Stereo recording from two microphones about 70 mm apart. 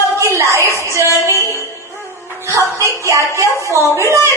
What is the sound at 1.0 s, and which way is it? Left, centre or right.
Music, left.